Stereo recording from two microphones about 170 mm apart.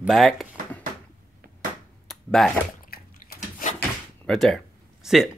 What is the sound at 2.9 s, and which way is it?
Bathtub, 60° left (ahead or behind).